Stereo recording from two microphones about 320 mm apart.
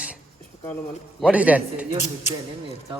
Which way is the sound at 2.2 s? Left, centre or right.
Left.